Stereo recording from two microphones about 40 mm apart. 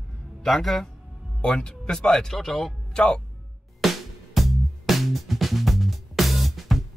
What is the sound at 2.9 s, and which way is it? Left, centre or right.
Speech, centre.